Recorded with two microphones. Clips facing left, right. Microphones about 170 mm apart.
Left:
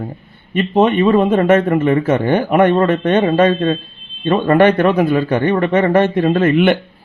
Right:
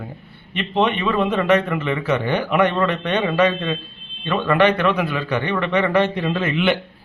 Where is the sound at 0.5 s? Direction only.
45° left (ahead or behind).